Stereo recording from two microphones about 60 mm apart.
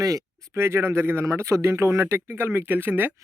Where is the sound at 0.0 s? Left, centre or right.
Right.